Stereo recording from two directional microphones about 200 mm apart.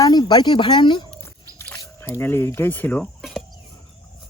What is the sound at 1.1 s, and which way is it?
Dog, 10° left (ahead or behind).